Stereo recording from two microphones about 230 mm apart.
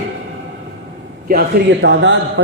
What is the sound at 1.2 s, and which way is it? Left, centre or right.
Speech, right.